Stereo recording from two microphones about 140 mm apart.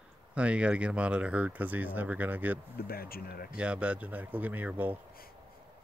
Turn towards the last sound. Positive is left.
turn(degrees=-10)  # may be behind; listen again after turning